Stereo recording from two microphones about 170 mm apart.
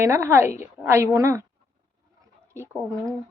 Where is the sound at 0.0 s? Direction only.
15° right (ahead or behind).